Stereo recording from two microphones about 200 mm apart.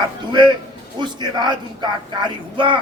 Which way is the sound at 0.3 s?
20° right (ahead or behind).